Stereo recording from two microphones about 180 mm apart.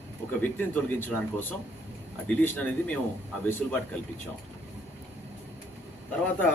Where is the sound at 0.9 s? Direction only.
10° left (ahead or behind).